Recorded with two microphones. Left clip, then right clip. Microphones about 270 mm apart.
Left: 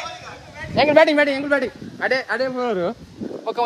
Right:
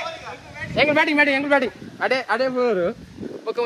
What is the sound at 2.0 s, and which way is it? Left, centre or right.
Speech, right.